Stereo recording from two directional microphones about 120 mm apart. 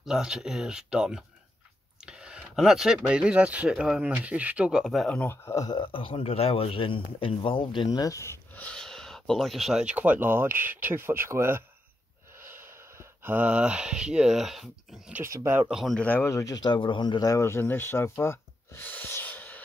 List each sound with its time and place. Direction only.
0.0 s speech: 5° right (ahead or behind)
5.1 s speech: 20° left (ahead or behind)
5.8 s speech: 45° left (ahead or behind); by 8.6 s 25° left (ahead or behind)
8.6 s speech: 5° left (ahead or behind); by 11.6 s 20° right (ahead or behind)
13.2 s speech: 15° right (ahead or behind)
15.3 s speech: 25° right (ahead or behind)
15.7 s speech: centre (ahead or behind)
16.0 s speech: 15° left (ahead or behind)